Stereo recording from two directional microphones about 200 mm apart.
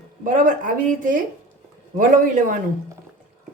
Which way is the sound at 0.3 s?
40° right (ahead or behind).